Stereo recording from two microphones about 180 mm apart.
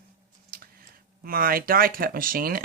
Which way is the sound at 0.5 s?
55° right (ahead or behind).